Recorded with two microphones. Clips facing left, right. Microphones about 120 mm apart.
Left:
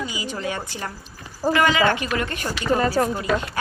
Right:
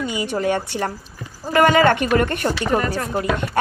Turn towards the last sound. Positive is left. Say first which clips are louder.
# right 2 dB
turn(degrees=-50)  # may be behind; listen again after turning